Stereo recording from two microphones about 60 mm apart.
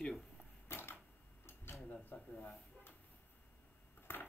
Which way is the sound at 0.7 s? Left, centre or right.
Left.